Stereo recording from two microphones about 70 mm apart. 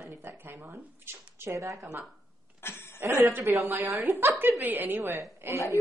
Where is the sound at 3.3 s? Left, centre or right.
Right.